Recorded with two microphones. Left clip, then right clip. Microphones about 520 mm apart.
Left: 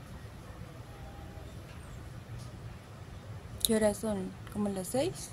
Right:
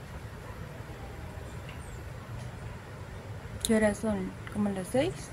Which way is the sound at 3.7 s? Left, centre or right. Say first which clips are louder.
Right 3 dB; left.